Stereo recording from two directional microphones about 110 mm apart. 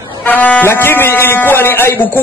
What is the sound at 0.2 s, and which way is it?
A man's voice, 15° left (ahead or behind).